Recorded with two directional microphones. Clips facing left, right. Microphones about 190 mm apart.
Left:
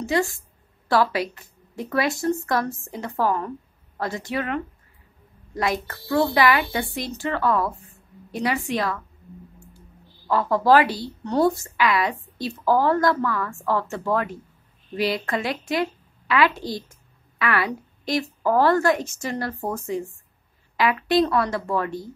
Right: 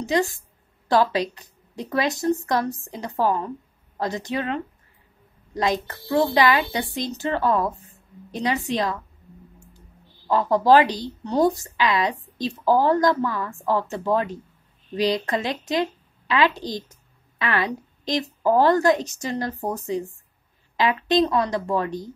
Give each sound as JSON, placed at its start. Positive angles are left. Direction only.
{"t": 0.0, "sound": "a woman's voice", "side_deg": -20}